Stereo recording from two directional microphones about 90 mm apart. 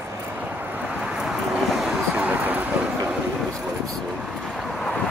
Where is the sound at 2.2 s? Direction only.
15° right (ahead or behind).